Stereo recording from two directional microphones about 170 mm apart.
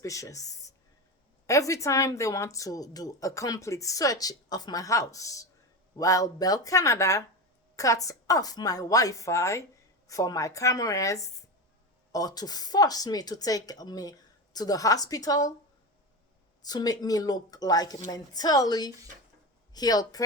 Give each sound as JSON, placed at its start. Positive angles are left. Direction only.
{"t": 0.0, "sound": "a woman's voice", "side_deg": 20}
{"t": 16.6, "sound": "a woman's voice", "side_deg": 20}